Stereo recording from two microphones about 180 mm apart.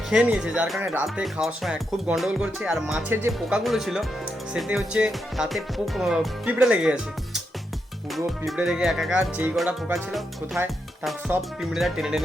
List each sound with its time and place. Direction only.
0.1 s speech: 5° right (ahead or behind)
3.6 s speech: centre (ahead or behind)
8.1 s speech: centre (ahead or behind)
11.6 s speech: centre (ahead or behind)